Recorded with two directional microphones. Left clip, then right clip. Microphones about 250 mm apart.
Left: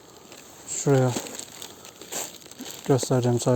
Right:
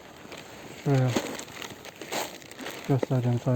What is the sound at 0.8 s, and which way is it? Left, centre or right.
Speech, left.